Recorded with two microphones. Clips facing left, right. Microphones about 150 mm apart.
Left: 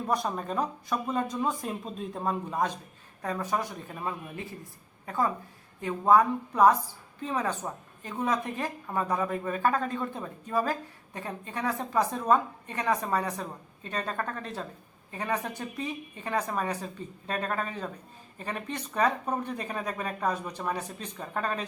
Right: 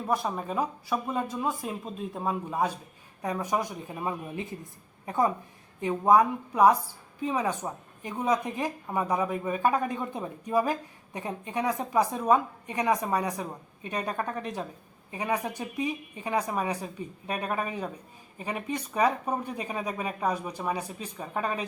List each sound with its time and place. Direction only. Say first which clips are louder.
0.0 s speech: even; 5° right (ahead or behind)